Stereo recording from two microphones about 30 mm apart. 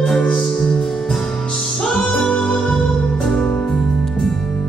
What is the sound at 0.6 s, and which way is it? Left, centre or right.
Music, left.